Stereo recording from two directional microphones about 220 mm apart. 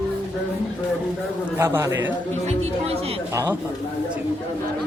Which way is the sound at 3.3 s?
15° right (ahead or behind).